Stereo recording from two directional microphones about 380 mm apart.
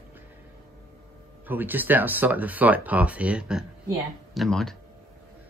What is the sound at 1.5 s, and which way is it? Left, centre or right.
A woman's voice, centre.